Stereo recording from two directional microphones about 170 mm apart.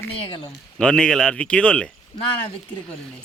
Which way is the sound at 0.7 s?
5° left (ahead or behind).